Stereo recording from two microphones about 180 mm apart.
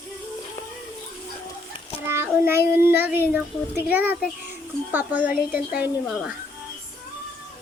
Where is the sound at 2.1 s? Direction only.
10° right (ahead or behind).